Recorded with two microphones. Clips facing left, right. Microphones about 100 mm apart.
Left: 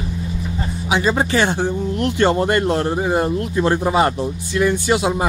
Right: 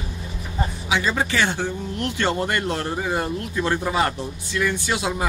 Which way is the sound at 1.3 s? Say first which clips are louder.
Left 5 dB; 35° left (ahead or behind).